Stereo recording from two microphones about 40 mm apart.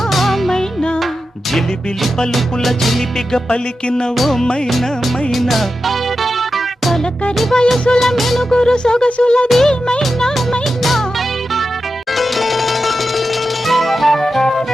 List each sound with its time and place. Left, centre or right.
0.1 s music: centre
2.3 s music: centre
3.5 s music: left
4.2 s music: centre
7.5 s music of bollywood: centre
7.9 s music: centre
8.4 s music: centre
9.5 s music of bollywood: centre
12.1 s music: centre